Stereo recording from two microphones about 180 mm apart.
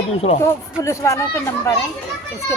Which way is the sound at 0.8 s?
15° left (ahead or behind).